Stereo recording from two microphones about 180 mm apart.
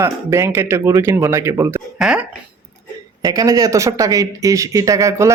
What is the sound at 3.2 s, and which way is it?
Speech, 20° right (ahead or behind).